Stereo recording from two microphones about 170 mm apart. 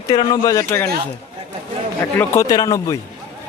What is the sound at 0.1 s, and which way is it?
Speech, 25° left (ahead or behind).